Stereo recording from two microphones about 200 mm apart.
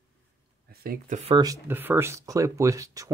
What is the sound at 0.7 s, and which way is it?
Speech, 45° right (ahead or behind).